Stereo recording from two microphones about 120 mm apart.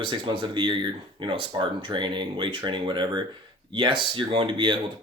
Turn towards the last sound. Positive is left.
turn(degrees=-45)  # may be behind; listen again after turning